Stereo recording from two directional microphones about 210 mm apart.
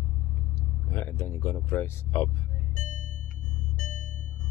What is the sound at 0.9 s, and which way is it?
Speech, 10° left (ahead or behind).